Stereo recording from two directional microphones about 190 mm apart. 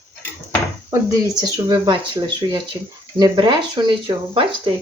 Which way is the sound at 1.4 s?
20° right (ahead or behind).